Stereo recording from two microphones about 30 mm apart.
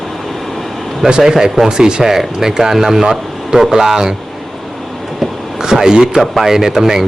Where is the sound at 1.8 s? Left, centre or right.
Right.